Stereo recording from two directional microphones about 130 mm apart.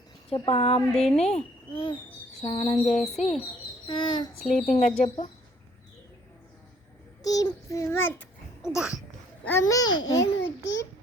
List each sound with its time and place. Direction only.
0.3 s speech: 40° left (ahead or behind)
3.8 s a child's voice: 40° left (ahead or behind)
4.4 s speech: 60° left (ahead or behind)
7.2 s a child's voice: 30° left (ahead or behind)
8.6 s babbling: 5° right (ahead or behind)
9.4 s a child's voice: 20° left (ahead or behind)